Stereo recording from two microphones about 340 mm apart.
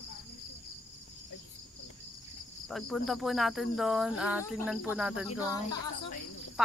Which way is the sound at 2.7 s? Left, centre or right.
Centre.